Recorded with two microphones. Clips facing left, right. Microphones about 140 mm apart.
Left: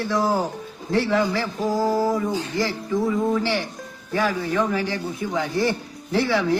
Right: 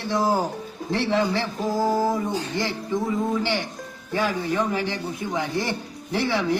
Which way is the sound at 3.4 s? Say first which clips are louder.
Left 1 dB; 20° right (ahead or behind).